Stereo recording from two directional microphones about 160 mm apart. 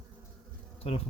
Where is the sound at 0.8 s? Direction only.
40° left (ahead or behind).